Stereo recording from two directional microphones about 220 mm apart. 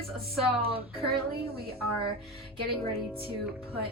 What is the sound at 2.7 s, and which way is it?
Music, 25° right (ahead or behind).